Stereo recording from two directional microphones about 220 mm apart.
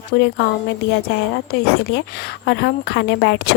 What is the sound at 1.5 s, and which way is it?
A woman's voice, 45° left (ahead or behind).